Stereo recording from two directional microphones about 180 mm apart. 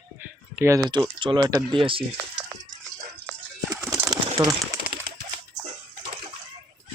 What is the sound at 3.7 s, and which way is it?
Bird, 20° right (ahead or behind).